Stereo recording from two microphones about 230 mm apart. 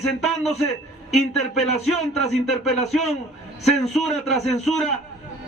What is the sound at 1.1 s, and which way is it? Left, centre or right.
A man's voice, centre.